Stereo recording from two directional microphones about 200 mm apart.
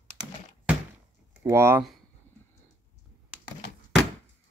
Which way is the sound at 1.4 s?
10° right (ahead or behind).